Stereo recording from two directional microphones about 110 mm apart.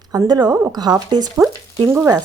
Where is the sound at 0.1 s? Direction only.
35° right (ahead or behind).